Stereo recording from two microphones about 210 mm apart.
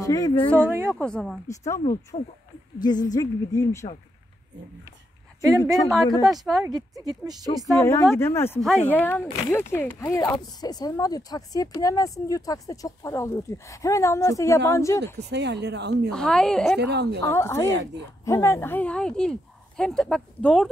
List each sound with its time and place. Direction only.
0.0 s speech: 15° left (ahead or behind)
0.6 s speech: 10° right (ahead or behind)
0.8 s speech: 5° left (ahead or behind)
1.5 s speech: 15° left (ahead or behind)
2.1 s speech: 30° left (ahead or behind)
5.7 s speech: centre (ahead or behind)
6.7 s speech: 15° right (ahead or behind)
7.7 s speech: 15° left (ahead or behind)
15.1 s speech: 55° right (ahead or behind)
16.1 s speech: 5° left (ahead or behind)
16.7 s speech: 50° right (ahead or behind)
17.2 s speech: 10° left (ahead or behind)